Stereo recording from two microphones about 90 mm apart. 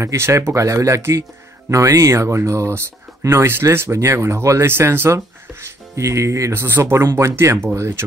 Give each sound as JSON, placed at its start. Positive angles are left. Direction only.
{"t": 0.0, "sound": "speech", "side_deg": -30}